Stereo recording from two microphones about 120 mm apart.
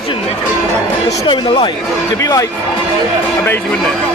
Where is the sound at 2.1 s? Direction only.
30° left (ahead or behind).